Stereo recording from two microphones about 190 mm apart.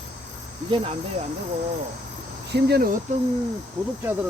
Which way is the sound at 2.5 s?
60° right (ahead or behind).